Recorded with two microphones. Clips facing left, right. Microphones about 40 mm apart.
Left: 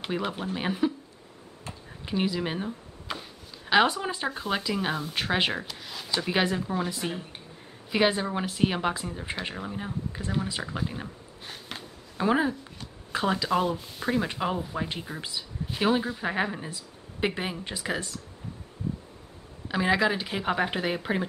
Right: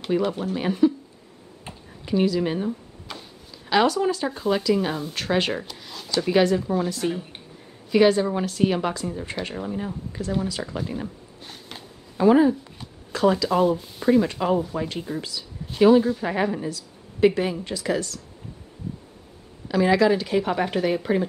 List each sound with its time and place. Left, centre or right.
0.0 s speech: centre
2.0 s a sound: centre
3.7 s speech: left; by 5.1 s centre
5.1 s speech: centre
10.6 s a sound: centre
13.1 s speech: left
13.5 s speech: centre
14.2 s speech: centre
16.6 s speech: left
19.7 s speech: centre